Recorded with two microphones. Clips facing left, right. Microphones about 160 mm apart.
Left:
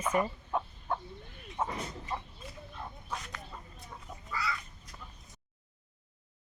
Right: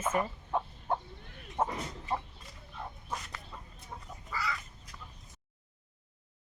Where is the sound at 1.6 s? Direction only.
45° right (ahead or behind).